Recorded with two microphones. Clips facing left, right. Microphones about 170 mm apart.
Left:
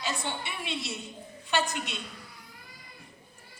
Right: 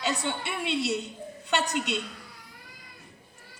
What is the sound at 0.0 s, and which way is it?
A man's voice, 70° right (ahead or behind).